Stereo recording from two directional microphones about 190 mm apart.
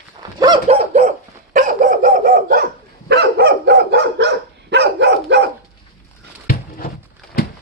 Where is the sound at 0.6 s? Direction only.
35° right (ahead or behind); by 5.5 s 65° right (ahead or behind).